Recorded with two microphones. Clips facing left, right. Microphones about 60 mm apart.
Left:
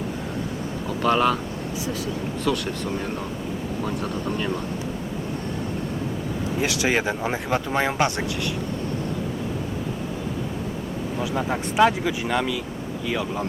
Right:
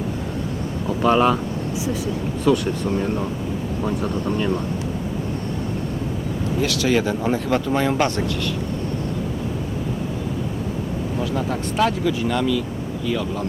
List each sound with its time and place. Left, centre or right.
1.0 s speech: centre
2.5 s speech: right
4.3 s speech: centre
6.6 s speech: left
11.3 s speech: left